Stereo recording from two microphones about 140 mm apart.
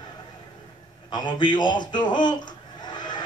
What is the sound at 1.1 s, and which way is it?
A man's voice, 30° left (ahead or behind).